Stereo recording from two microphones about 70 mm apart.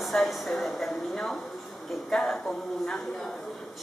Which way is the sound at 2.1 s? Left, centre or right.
Centre.